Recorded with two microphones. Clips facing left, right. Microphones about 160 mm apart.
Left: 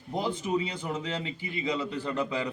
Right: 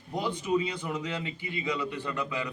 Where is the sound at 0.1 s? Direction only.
30° left (ahead or behind).